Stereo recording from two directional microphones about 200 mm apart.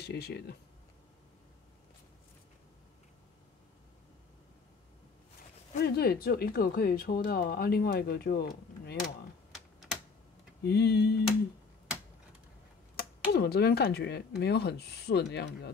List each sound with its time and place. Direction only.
0.0 s speech: 55° left (ahead or behind)
5.8 s speech: 50° left (ahead or behind)
9.5 s typing: centre (ahead or behind)
10.6 s speech: 50° left (ahead or behind)
12.9 s speech: 55° left (ahead or behind)